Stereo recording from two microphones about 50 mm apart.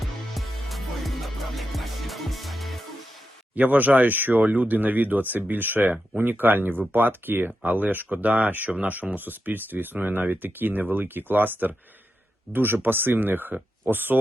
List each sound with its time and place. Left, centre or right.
0.3 s music: centre
3.5 s speech: right